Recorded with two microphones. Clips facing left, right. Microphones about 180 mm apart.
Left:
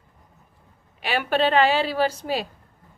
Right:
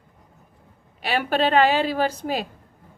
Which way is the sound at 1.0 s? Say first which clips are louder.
Even; 40° right (ahead or behind).